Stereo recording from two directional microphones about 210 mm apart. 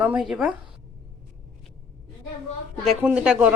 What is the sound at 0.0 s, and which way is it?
Speech, 5° right (ahead or behind).